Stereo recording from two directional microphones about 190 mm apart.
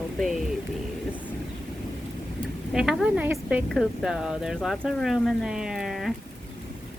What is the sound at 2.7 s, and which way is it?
A woman's voice, 5° right (ahead or behind).